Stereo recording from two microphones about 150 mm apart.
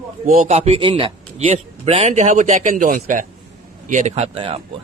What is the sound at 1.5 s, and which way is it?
A man's voice, 50° right (ahead or behind).